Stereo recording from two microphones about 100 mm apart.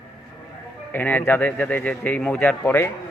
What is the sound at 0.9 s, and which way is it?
Speech, 20° left (ahead or behind).